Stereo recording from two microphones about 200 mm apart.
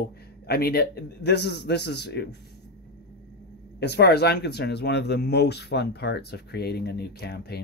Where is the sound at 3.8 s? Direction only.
55° left (ahead or behind).